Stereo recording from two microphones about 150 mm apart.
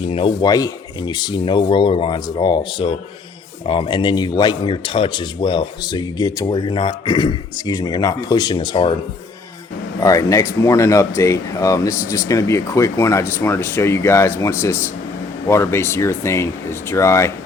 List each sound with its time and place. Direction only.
0.1 s speech: 40° left (ahead or behind)
0.4 s speech: 25° left (ahead or behind)
10.0 s speech: 20° left (ahead or behind)